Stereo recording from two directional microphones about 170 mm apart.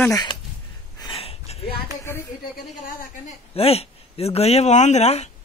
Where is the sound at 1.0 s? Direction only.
35° left (ahead or behind).